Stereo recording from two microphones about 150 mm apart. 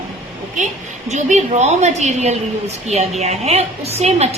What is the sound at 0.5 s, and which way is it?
A woman's voice, 50° right (ahead or behind).